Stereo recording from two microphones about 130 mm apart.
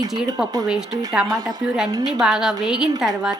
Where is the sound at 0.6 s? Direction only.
5° right (ahead or behind).